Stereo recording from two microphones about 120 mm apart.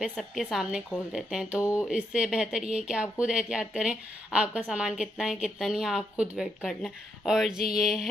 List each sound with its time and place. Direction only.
0.1 s speech: centre (ahead or behind)
1.6 s speech: 25° left (ahead or behind)
1.9 s speech: 10° right (ahead or behind)